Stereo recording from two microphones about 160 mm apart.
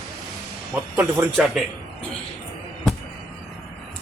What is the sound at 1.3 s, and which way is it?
Speech, centre (ahead or behind).